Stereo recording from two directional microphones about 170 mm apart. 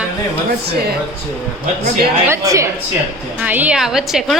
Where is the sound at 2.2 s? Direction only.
15° right (ahead or behind).